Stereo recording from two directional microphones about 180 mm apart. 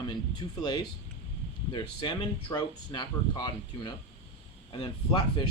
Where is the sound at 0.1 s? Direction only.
25° left (ahead or behind).